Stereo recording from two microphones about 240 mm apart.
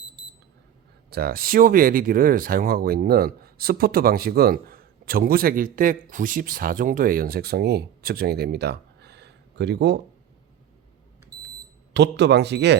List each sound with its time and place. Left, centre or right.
1.1 s speech: right
11.9 s speech: right